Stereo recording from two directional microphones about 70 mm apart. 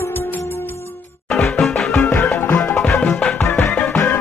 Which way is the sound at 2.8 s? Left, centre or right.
Centre.